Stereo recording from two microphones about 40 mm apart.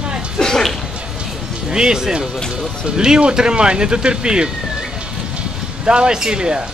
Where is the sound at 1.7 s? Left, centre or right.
Centre.